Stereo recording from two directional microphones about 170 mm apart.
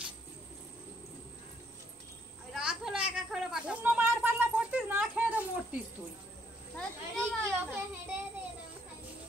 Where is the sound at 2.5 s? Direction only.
5° right (ahead or behind).